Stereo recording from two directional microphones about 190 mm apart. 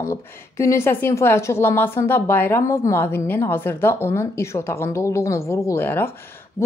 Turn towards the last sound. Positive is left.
turn(degrees=10)  # may be behind; listen again after turning